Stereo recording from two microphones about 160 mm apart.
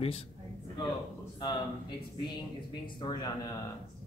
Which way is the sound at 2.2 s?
25° left (ahead or behind).